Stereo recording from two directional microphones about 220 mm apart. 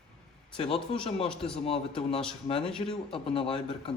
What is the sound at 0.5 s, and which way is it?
Speech, 25° left (ahead or behind).